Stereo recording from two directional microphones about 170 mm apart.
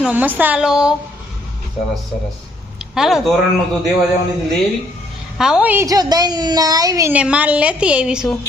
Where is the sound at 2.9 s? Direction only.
Centre (ahead or behind).